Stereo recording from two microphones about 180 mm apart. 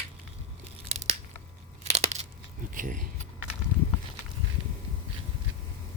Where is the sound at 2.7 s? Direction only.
50° right (ahead or behind).